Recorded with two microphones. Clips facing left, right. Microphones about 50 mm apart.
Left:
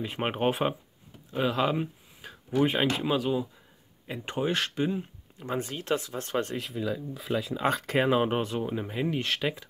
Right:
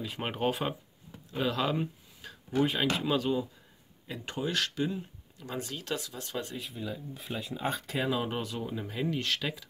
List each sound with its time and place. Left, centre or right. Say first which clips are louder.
0.0 s speech: left 4 dB; left
1.3 s a sound: left 3 dB; centre
2.6 s speech: left 3 dB; left
3.1 s speech: left 2 dB; centre
4.1 s speech: left 4 dB; left
6.5 s speech: left 7 dB; left
7.9 s speech: left 8 dB; left